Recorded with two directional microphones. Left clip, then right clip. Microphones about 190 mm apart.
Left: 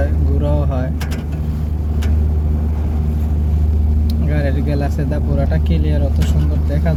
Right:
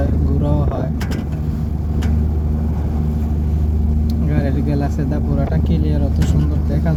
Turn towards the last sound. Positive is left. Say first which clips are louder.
# even
turn(degrees=-5)  # may be behind; listen again after turning